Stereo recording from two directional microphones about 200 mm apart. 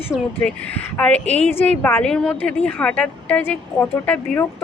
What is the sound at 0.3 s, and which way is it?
A woman's voice, 10° left (ahead or behind).